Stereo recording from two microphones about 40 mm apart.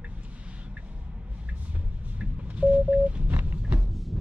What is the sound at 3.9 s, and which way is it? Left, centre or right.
Music, centre.